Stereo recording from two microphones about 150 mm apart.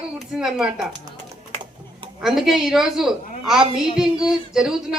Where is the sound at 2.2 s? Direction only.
Centre (ahead or behind).